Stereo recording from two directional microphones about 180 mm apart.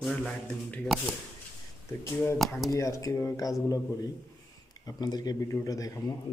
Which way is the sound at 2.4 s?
Centre (ahead or behind).